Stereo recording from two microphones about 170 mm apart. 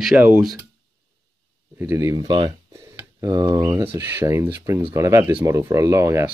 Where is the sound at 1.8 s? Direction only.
15° right (ahead or behind).